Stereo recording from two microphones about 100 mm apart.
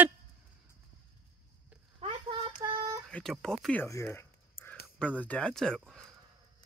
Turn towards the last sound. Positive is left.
turn(degrees=5)  # may be behind; listen again after turning